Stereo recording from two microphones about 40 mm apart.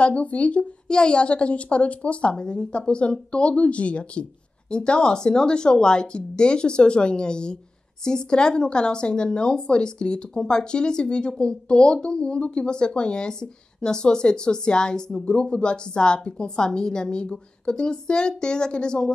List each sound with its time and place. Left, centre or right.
0.0 s speech: left
0.8 s speech: left